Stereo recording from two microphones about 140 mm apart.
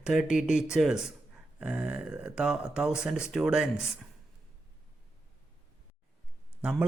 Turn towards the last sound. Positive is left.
turn(degrees=-10)  # may be behind; listen again after turning